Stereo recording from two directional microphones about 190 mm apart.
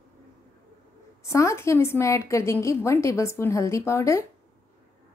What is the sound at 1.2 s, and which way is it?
A woman's voice, 15° left (ahead or behind).